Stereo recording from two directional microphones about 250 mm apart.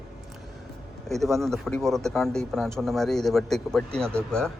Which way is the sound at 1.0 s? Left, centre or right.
Centre.